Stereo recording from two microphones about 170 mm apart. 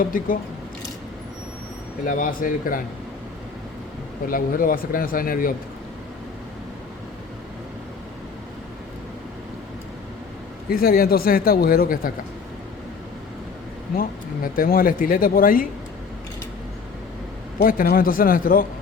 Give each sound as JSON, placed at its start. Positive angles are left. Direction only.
{"t": 0.0, "sound": "a man's voice", "side_deg": 55}
{"t": 2.0, "sound": "a man's voice", "side_deg": 50}
{"t": 4.3, "sound": "speech", "side_deg": 55}
{"t": 10.7, "sound": "speech", "side_deg": 60}
{"t": 13.9, "sound": "speech", "side_deg": 60}
{"t": 17.6, "sound": "speech", "side_deg": 55}